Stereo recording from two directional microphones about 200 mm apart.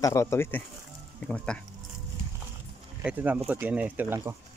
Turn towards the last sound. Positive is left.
turn(degrees=-10)  # may be behind; listen again after turning